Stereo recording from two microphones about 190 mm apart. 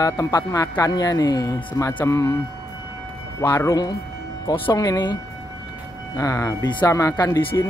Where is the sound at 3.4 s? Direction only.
15° left (ahead or behind).